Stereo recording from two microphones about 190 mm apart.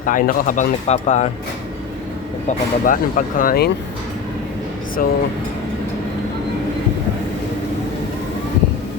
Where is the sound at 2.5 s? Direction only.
45° left (ahead or behind).